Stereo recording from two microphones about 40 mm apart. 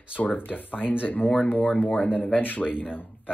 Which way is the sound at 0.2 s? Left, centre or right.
Left.